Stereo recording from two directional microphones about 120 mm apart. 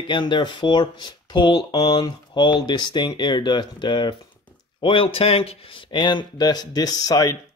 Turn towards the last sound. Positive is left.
turn(degrees=30)  # may be behind; listen again after turning